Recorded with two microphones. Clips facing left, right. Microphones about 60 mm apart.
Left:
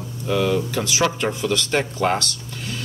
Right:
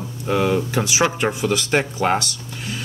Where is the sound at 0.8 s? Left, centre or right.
Centre.